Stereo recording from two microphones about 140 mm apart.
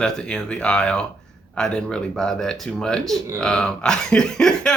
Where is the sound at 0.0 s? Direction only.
5° left (ahead or behind).